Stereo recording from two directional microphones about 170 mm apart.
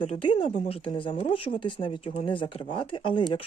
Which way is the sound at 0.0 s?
30° left (ahead or behind).